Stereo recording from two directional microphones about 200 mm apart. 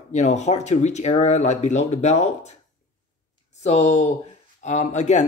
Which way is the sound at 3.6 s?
35° left (ahead or behind).